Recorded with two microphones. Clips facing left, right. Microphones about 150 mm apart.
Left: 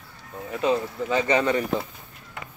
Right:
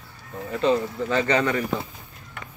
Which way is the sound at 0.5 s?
10° left (ahead or behind).